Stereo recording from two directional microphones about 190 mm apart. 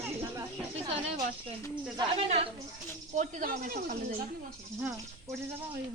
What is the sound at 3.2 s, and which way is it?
Speech, 40° right (ahead or behind).